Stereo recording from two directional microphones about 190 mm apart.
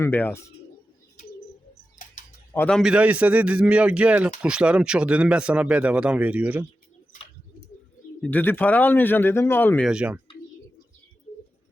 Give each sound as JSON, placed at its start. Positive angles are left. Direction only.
{"t": 0.0, "sound": "speech", "side_deg": 10}
{"t": 2.0, "sound": "tick-tock", "side_deg": 45}
{"t": 2.5, "sound": "a man's voice", "side_deg": 10}
{"t": 8.2, "sound": "speech", "side_deg": 10}
{"t": 9.9, "sound": "a man's voice", "side_deg": -5}